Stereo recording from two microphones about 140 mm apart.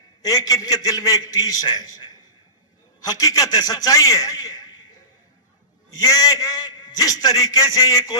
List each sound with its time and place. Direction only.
0.2 s a man's voice: 25° left (ahead or behind)
5.9 s a man's voice: 25° left (ahead or behind)